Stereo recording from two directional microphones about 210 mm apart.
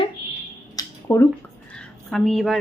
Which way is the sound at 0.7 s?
10° left (ahead or behind).